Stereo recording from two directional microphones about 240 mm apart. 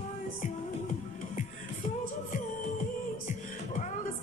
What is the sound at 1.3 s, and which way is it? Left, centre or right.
Music, left.